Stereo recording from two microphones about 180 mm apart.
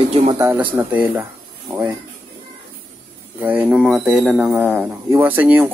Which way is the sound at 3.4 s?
5° right (ahead or behind).